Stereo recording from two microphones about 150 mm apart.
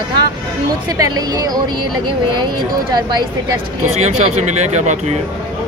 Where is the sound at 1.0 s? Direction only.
25° right (ahead or behind).